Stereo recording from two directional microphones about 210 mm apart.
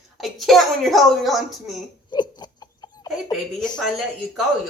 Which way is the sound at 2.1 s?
20° left (ahead or behind).